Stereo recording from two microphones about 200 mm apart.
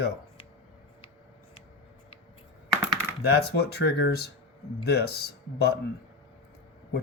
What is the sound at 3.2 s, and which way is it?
Speech, 55° left (ahead or behind).